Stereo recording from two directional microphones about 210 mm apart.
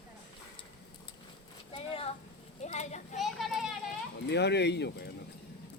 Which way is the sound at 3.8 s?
55° left (ahead or behind).